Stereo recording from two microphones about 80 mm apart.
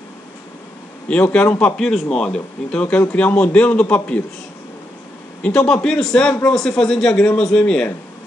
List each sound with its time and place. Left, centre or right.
1.0 s a man's voice: centre
5.4 s a man's voice: centre